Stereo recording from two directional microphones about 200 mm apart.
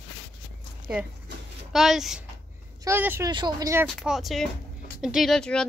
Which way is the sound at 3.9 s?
Centre (ahead or behind).